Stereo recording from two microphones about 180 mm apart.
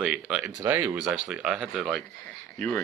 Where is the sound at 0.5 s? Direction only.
15° right (ahead or behind).